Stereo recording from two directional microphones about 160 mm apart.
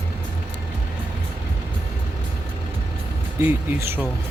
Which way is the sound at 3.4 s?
15° right (ahead or behind).